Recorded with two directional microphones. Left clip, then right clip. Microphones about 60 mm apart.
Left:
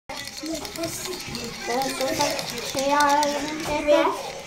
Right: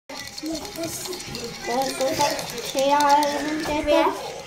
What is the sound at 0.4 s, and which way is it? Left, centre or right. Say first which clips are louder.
Speech: right 1 dB; centre.